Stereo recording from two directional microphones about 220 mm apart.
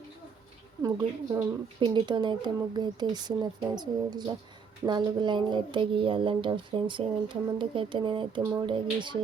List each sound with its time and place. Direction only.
0.8 s a woman's voice: 15° right (ahead or behind)